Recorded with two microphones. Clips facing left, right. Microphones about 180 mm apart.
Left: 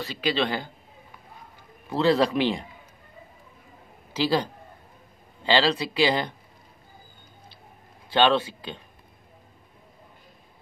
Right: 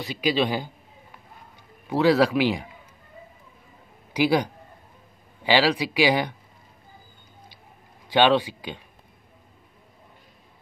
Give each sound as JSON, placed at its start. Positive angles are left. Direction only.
{"t": 0.0, "sound": "speech", "side_deg": -10}
{"t": 1.9, "sound": "speech", "side_deg": -10}
{"t": 4.1, "sound": "a man's voice", "side_deg": -15}
{"t": 8.1, "sound": "speech", "side_deg": -15}